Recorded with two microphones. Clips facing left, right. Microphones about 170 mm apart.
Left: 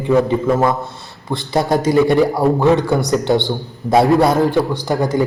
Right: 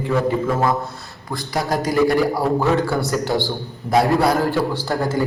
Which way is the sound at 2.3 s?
20° left (ahead or behind).